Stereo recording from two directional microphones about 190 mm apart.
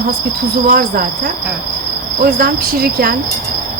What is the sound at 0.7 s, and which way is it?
Speech, 50° right (ahead or behind).